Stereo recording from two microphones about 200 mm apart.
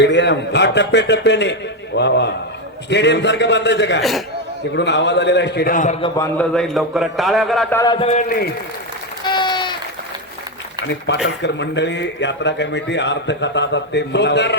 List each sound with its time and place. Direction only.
0.0 s a man's voice: 60° left (ahead or behind); by 6.0 s 40° left (ahead or behind)
6.0 s a man's voice: 15° left (ahead or behind)
7.8 s a man's voice: 25° left (ahead or behind); by 8.4 s 40° left (ahead or behind)
9.2 s applause: 20° left (ahead or behind)
11.1 s a man's voice: 65° left (ahead or behind)